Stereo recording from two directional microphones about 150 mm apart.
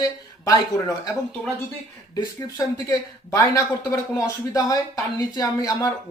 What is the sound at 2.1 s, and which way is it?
Speech, 25° left (ahead or behind).